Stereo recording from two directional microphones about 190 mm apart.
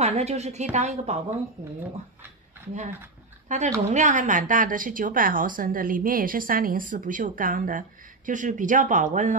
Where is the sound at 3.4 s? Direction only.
40° right (ahead or behind).